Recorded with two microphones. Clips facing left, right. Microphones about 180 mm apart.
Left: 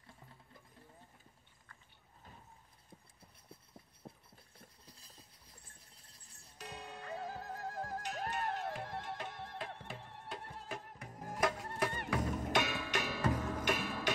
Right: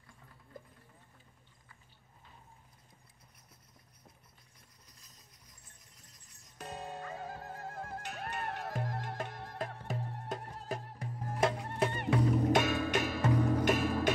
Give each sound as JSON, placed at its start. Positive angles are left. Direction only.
{"t": 3.4, "sound": "hum", "side_deg": 30}
{"t": 4.6, "sound": "music", "side_deg": 30}
{"t": 6.6, "sound": "music", "side_deg": -50}
{"t": 7.7, "sound": "music", "side_deg": 40}
{"t": 8.7, "sound": "music", "side_deg": -45}
{"t": 12.5, "sound": "music", "side_deg": -45}